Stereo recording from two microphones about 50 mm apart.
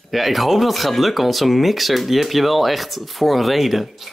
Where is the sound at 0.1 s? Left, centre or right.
Centre.